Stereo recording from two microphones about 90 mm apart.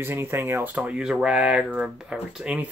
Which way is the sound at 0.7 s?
10° right (ahead or behind).